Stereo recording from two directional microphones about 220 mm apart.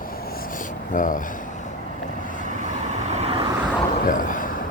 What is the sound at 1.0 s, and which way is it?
Speech, 35° left (ahead or behind).